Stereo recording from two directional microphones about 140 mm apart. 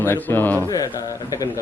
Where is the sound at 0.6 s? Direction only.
25° left (ahead or behind).